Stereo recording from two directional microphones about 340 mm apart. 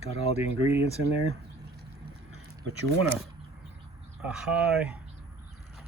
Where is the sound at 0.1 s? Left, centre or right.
Centre.